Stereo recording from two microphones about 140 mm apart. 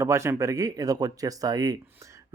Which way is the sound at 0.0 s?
20° right (ahead or behind).